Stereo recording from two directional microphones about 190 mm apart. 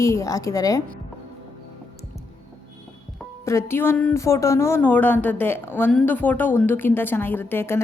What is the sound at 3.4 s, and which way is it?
Speech, 15° left (ahead or behind).